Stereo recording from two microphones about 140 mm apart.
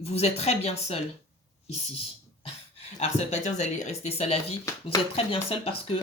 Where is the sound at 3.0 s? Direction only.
50° left (ahead or behind).